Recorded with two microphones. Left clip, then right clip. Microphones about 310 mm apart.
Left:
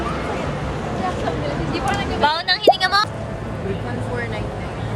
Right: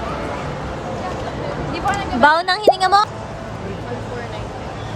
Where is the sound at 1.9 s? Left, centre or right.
Right.